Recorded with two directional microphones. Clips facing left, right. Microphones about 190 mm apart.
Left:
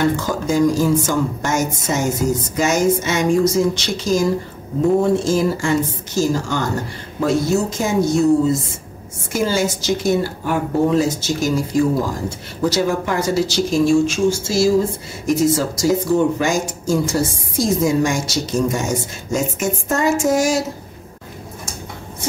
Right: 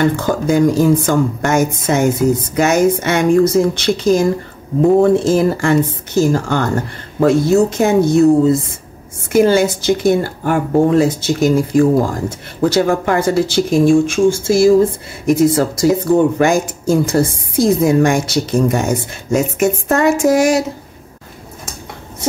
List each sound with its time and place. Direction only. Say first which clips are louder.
0.1 s a woman's voice: right 4 dB; 55° right (ahead or behind)